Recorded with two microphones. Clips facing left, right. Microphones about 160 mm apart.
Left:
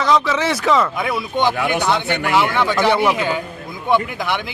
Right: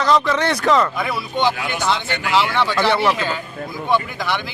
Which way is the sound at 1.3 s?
55° left (ahead or behind).